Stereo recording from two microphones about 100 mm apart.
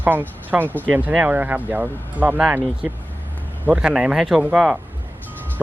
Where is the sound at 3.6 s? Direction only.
10° right (ahead or behind).